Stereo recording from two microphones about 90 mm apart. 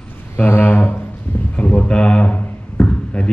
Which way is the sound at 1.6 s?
15° left (ahead or behind).